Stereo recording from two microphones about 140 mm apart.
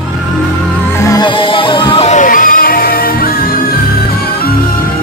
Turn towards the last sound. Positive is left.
turn(degrees=90)